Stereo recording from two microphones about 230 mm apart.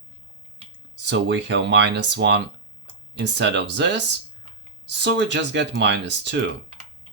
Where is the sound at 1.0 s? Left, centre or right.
Right.